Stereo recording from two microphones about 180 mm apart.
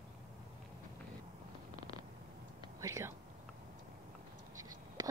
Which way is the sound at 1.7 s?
30° left (ahead or behind).